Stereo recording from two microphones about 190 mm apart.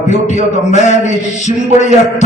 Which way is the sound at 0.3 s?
40° left (ahead or behind).